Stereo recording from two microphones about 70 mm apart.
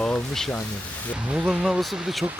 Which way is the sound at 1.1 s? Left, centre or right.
Centre.